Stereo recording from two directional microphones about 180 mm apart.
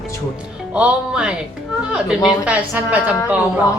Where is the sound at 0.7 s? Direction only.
5° right (ahead or behind).